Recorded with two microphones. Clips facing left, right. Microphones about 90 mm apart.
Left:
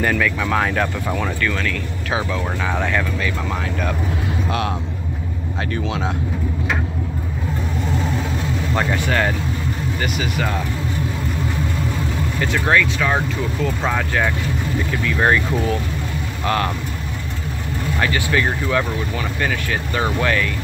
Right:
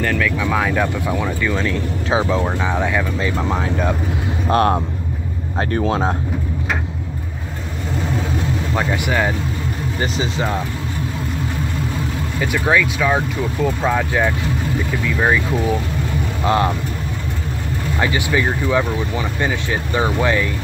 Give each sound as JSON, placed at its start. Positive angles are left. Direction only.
{"t": 0.0, "sound": "speech", "side_deg": 5}
{"t": 3.2, "sound": "speech", "side_deg": -25}
{"t": 4.5, "sound": "speech", "side_deg": -45}
{"t": 8.7, "sound": "speech", "side_deg": -10}
{"t": 10.1, "sound": "speech", "side_deg": -25}
{"t": 12.4, "sound": "speech", "side_deg": -10}
{"t": 16.4, "sound": "speech", "side_deg": -20}
{"t": 18.0, "sound": "speech", "side_deg": -15}